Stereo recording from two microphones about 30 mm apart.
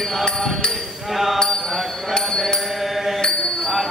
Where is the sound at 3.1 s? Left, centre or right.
Left.